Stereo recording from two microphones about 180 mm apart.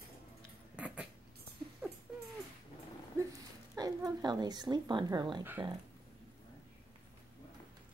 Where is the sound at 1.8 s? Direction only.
10° right (ahead or behind).